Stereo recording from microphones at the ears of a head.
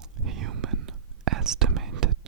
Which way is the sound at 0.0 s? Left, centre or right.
Right.